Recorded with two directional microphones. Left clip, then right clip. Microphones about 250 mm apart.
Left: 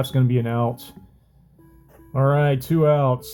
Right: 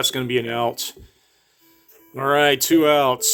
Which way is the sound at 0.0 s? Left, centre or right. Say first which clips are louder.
Right 4 dB; right.